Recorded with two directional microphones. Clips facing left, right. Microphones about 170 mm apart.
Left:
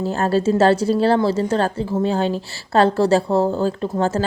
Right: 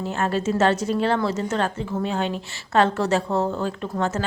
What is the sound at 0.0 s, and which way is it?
A woman's voice, 35° left (ahead or behind).